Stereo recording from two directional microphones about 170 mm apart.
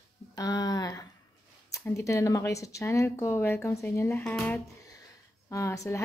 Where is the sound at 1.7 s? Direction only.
20° left (ahead or behind).